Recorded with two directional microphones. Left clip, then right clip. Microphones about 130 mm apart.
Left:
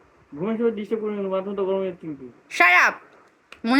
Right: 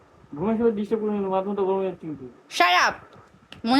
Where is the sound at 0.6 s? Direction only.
15° left (ahead or behind).